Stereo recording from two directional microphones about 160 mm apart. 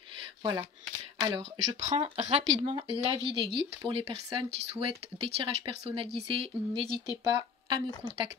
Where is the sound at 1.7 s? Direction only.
45° right (ahead or behind); by 4.3 s 30° right (ahead or behind).